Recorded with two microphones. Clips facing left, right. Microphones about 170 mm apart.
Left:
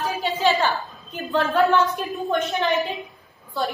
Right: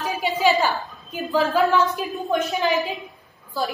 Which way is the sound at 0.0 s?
15° right (ahead or behind).